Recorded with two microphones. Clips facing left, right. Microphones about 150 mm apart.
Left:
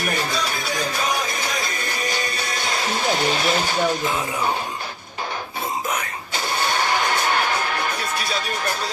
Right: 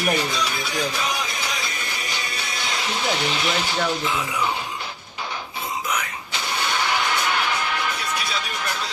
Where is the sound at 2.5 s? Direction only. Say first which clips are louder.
Left 2 dB; 45° left (ahead or behind).